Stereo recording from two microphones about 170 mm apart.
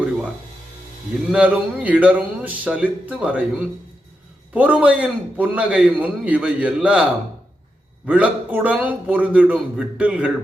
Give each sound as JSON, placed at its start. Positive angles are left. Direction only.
{"t": 1.3, "sound": "a man's voice", "side_deg": -10}